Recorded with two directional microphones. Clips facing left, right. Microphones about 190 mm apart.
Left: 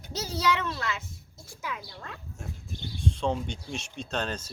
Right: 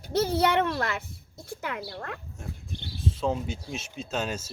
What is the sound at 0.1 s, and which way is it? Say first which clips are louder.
A woman's voice: right 5 dB; 55° right (ahead or behind).